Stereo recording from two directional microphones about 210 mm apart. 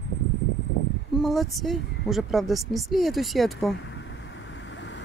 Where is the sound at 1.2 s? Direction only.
Centre (ahead or behind).